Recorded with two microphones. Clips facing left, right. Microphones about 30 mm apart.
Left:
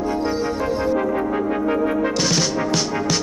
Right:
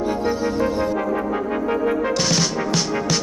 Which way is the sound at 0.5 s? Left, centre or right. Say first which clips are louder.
Even; centre.